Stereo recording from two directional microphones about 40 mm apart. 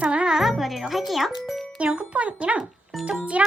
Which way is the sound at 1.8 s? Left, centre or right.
Right.